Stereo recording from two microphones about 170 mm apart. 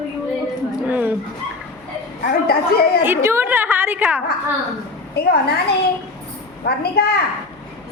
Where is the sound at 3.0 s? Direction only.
15° right (ahead or behind).